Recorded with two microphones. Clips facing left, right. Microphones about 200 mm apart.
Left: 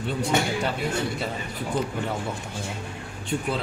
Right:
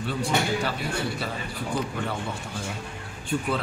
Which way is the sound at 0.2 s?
20° left (ahead or behind).